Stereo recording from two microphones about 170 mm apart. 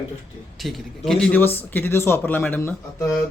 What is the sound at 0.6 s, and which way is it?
Speech, centre (ahead or behind).